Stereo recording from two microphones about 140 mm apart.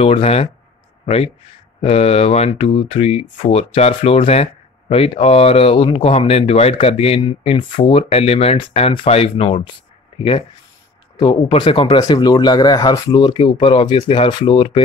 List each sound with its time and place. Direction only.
0.0 s speech: 45° left (ahead or behind)
7.2 s speech: 35° left (ahead or behind)